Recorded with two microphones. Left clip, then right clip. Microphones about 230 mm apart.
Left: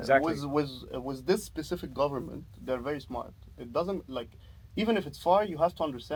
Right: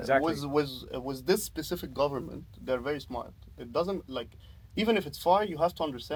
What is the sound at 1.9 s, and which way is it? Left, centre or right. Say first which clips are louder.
Speech: even; right.